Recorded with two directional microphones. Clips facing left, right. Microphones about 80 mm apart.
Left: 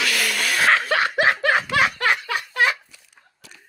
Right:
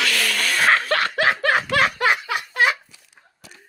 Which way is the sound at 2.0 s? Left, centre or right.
Centre.